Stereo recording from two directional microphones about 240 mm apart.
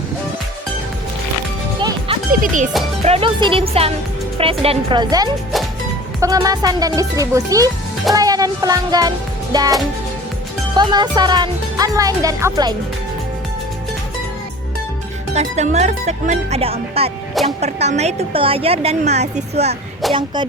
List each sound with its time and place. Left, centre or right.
2.3 s speech: right
3.0 s a woman's voice: right
10.8 s speech: centre
15.4 s a woman's voice: right
20.0 s a sound: centre